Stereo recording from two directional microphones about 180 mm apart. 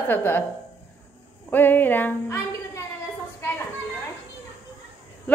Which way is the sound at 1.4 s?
10° left (ahead or behind).